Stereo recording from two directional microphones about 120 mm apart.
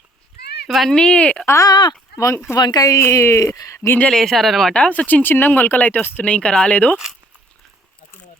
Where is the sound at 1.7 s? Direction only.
40° left (ahead or behind).